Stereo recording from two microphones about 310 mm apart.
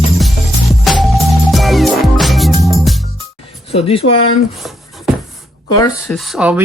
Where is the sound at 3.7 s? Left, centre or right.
Centre.